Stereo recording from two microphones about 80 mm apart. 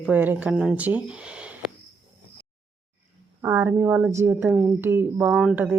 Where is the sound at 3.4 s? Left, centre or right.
Right.